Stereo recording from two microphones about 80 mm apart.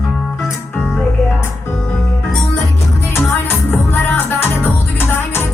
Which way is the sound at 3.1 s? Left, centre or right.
Left.